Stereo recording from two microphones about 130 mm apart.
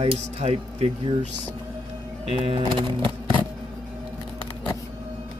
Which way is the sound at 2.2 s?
50° right (ahead or behind).